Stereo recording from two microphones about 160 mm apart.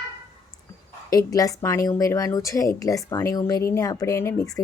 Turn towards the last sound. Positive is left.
turn(degrees=15)  # may be behind; listen again after turning